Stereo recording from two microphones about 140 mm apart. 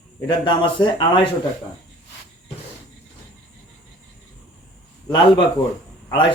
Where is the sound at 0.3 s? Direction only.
35° left (ahead or behind).